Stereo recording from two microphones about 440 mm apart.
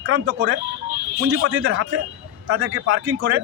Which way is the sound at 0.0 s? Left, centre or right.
Right.